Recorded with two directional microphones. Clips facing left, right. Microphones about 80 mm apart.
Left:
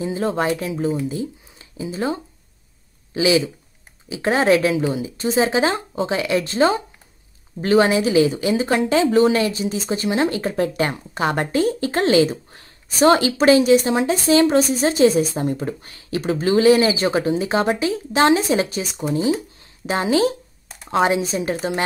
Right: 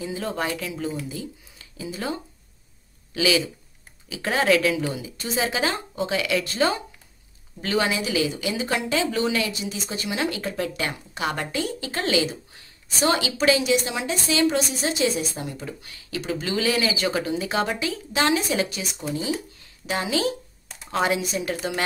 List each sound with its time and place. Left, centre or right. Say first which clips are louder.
0.0 s speech: left 7 dB; left
3.2 s speech: left 5 dB; left